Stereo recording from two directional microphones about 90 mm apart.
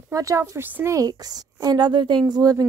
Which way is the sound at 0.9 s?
45° right (ahead or behind).